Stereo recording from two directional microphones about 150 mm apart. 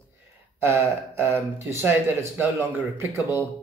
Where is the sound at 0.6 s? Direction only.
15° right (ahead or behind).